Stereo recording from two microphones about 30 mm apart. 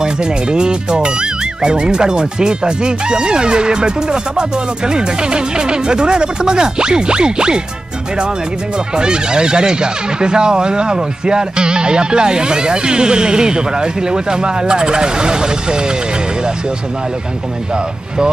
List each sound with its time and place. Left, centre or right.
0.0 s speech: right
8.9 s speech: right